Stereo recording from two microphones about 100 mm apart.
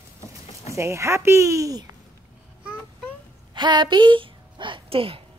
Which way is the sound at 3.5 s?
50° right (ahead or behind).